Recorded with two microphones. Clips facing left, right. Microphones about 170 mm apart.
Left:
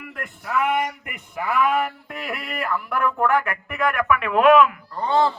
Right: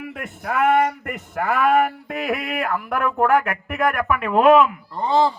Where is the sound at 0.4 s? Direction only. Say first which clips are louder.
Right 5 dB; 55° right (ahead or behind); by 4.7 s 30° right (ahead or behind).